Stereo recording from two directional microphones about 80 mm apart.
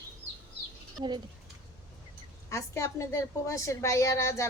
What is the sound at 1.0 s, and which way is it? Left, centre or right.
Speech, right.